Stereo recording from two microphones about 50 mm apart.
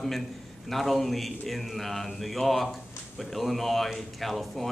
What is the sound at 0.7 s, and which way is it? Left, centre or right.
A man's voice, centre.